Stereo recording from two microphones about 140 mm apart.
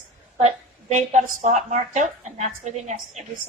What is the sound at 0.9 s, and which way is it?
A woman's voice, 60° right (ahead or behind).